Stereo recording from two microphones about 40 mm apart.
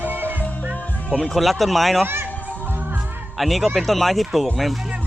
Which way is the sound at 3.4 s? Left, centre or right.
Centre.